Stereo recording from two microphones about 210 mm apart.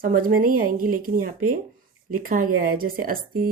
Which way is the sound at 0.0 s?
40° right (ahead or behind).